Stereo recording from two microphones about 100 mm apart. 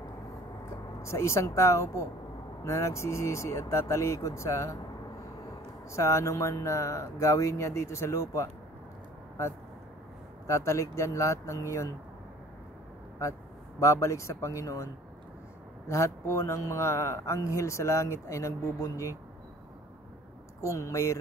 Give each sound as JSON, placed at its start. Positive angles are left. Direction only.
{"t": 1.0, "sound": "speech", "side_deg": 30}
{"t": 5.9, "sound": "speech", "side_deg": 30}
{"t": 10.4, "sound": "speech", "side_deg": 30}
{"t": 13.2, "sound": "speech", "side_deg": 30}
{"t": 15.9, "sound": "speech", "side_deg": 30}
{"t": 20.6, "sound": "speech", "side_deg": 30}